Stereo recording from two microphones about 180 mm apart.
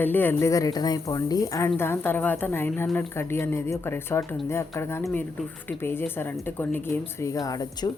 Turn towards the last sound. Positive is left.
turn(degrees=20)  # may be behind; listen again after turning